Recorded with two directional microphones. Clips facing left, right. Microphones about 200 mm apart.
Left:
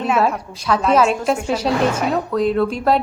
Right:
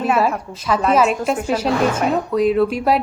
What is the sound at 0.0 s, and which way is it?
A woman's voice, 5° right (ahead or behind).